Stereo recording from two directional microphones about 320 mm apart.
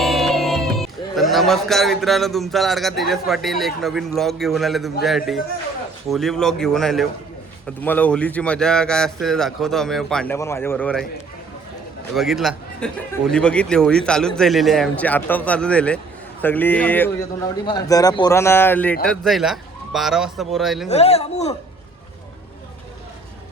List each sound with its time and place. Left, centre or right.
0.0 s music: centre
3.0 s a man's voice: centre
12.1 s a man's voice: centre
20.9 s speech: centre